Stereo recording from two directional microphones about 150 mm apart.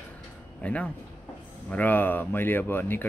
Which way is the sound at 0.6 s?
10° left (ahead or behind).